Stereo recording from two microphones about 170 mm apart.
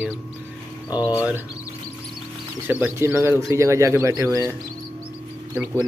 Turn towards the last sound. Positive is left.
turn(degrees=-15)  # may be behind; listen again after turning